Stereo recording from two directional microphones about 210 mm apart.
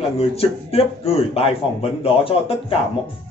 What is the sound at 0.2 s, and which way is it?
Speech, 30° left (ahead or behind).